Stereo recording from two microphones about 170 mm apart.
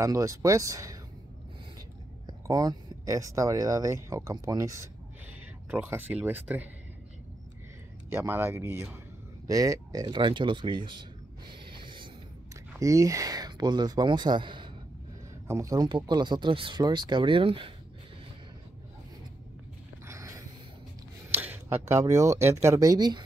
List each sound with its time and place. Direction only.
0.0 s speech: 20° right (ahead or behind)
2.2 s speech: 20° right (ahead or behind)
8.1 s speech: 10° right (ahead or behind); by 11.5 s 25° right (ahead or behind)
11.7 s a sound: 30° right (ahead or behind)
12.7 s speech: 20° right (ahead or behind)
15.4 s speech: 15° right (ahead or behind)
20.1 s a sound: 20° right (ahead or behind)
21.3 s speech: 10° right (ahead or behind)